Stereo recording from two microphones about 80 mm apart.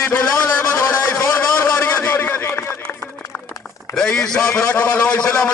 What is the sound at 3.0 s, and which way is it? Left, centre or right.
Music, left.